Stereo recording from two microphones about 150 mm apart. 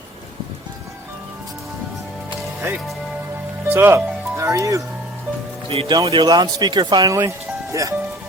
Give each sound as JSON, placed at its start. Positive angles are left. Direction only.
{"t": 3.6, "sound": "music", "side_deg": -15}
{"t": 5.6, "sound": "speech", "side_deg": -40}
{"t": 5.9, "sound": "speech", "side_deg": -25}